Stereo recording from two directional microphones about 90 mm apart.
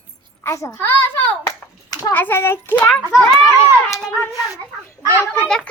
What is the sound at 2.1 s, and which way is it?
Speech, 20° left (ahead or behind).